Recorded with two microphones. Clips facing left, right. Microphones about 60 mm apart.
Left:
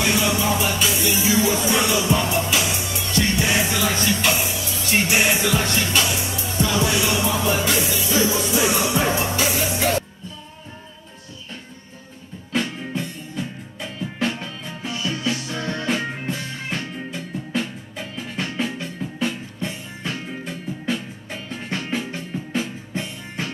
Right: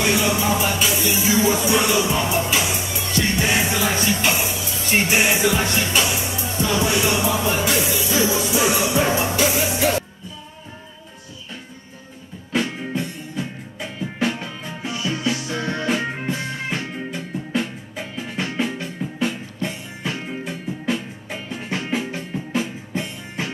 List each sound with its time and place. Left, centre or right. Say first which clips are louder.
0.0 s music: right 1 dB; centre
3.1 s music: even; centre
7.0 s music: right 1 dB; centre
7.2 s music: right 1 dB; centre
12.5 s music: right 2 dB; centre